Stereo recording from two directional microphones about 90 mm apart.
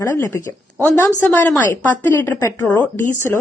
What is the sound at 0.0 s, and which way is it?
A woman's voice, 30° left (ahead or behind).